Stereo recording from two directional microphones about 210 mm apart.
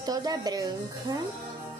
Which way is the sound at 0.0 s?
15° right (ahead or behind).